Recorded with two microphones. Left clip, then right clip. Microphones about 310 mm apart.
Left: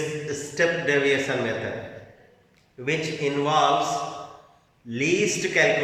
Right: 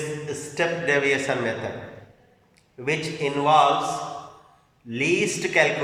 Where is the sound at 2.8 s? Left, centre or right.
Centre.